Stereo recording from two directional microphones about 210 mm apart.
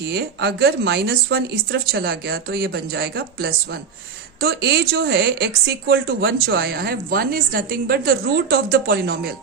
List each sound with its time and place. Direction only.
0.1 s a woman's voice: 50° right (ahead or behind)